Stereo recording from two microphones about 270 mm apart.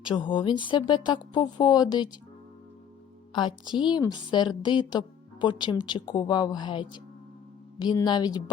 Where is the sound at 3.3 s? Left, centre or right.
Centre.